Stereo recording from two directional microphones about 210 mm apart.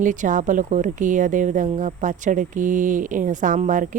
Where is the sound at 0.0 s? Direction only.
40° right (ahead or behind).